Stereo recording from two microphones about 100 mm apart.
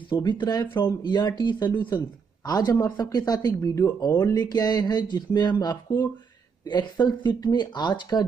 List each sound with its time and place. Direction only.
0.1 s speech: 50° left (ahead or behind)
3.5 s speech: 30° left (ahead or behind); by 8.3 s 45° left (ahead or behind)